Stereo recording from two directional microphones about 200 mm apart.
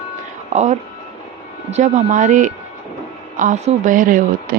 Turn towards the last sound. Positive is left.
turn(degrees=-45)  # may be behind; listen again after turning